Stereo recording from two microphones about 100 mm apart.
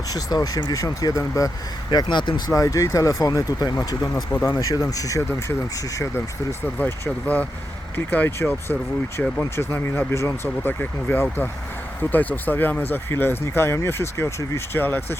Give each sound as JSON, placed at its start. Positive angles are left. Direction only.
{"t": 0.1, "sound": "speech", "side_deg": 40}
{"t": 1.9, "sound": "speech", "side_deg": 50}
{"t": 2.5, "sound": "speech", "side_deg": 35}
{"t": 4.1, "sound": "speech", "side_deg": 20}
{"t": 4.6, "sound": "speech", "side_deg": 35}
{"t": 6.7, "sound": "speech", "side_deg": 20}